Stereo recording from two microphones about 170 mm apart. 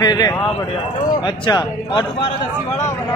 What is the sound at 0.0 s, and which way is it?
A man's voice, 25° left (ahead or behind).